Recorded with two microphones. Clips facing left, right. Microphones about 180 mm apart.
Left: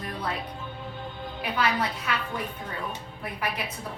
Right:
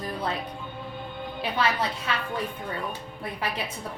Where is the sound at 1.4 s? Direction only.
30° right (ahead or behind).